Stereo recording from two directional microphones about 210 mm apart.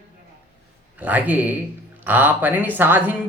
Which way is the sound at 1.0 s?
5° right (ahead or behind).